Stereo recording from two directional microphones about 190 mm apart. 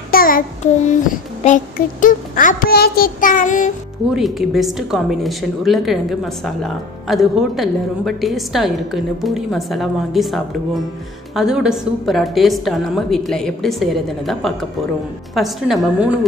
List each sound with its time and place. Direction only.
0.1 s child singing: 50° left (ahead or behind)
1.4 s a child's voice: 40° left (ahead or behind)
4.1 s a woman's voice: centre (ahead or behind)